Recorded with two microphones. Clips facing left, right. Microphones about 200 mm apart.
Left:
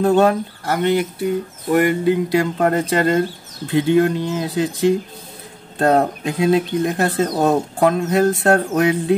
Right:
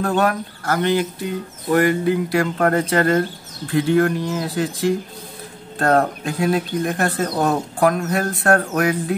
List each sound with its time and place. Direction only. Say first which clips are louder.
0.0 s speech: left 5 dB; 25° left (ahead or behind)